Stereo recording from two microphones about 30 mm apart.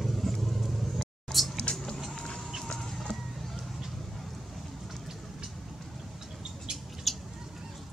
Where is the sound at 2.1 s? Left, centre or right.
Left.